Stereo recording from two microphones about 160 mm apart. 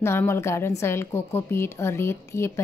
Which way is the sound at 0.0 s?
15° left (ahead or behind).